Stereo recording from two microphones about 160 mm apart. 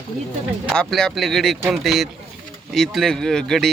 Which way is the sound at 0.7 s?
Centre (ahead or behind).